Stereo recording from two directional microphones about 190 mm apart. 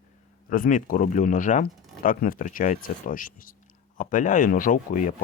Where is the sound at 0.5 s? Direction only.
45° left (ahead or behind).